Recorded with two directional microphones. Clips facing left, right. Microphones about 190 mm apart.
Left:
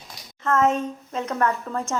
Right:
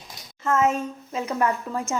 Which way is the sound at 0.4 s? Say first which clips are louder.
Left 1 dB; 5° right (ahead or behind).